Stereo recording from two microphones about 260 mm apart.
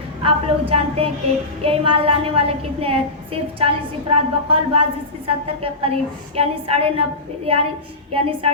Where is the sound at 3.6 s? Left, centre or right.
Right.